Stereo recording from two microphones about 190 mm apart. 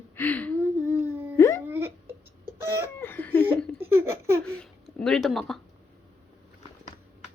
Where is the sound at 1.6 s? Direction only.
10° right (ahead or behind).